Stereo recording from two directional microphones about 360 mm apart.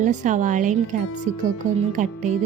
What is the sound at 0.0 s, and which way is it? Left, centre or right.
A woman's voice, right.